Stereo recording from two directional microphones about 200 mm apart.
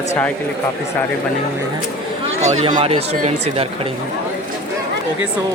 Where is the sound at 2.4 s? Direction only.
35° right (ahead or behind).